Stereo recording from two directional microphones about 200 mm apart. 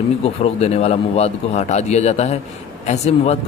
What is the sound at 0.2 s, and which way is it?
Speech, 30° left (ahead or behind).